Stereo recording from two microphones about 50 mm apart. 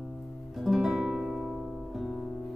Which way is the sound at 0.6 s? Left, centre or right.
Centre.